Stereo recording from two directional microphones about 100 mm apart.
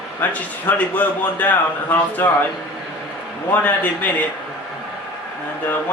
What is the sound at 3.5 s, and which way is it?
Speech, 15° left (ahead or behind).